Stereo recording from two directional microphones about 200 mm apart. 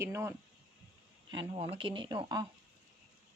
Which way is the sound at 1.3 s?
25° right (ahead or behind).